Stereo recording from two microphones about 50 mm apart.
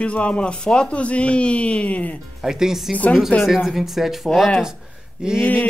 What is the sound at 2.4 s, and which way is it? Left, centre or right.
Speech, centre.